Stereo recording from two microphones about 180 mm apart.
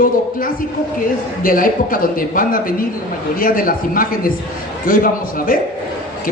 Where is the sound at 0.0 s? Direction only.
50° left (ahead or behind).